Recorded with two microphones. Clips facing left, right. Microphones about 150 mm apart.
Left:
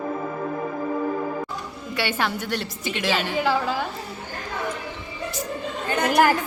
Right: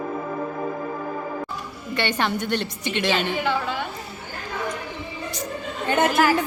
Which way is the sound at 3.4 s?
35° left (ahead or behind).